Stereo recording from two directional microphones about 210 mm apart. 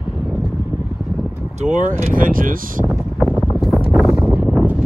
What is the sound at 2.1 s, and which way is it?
Speech, 40° right (ahead or behind).